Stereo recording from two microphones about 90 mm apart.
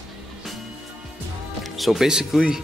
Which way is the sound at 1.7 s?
Centre (ahead or behind).